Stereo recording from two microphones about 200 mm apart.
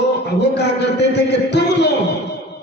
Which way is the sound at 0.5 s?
60° left (ahead or behind).